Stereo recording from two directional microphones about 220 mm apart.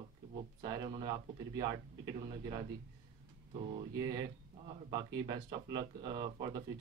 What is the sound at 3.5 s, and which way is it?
Speech, 20° right (ahead or behind).